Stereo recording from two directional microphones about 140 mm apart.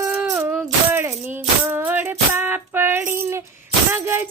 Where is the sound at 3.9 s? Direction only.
15° right (ahead or behind).